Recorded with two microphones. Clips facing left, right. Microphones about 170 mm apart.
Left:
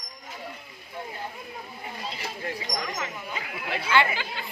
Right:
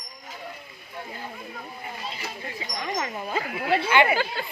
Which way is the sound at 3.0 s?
40° right (ahead or behind).